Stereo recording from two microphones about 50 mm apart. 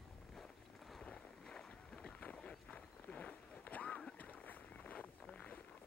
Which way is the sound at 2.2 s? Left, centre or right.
Left.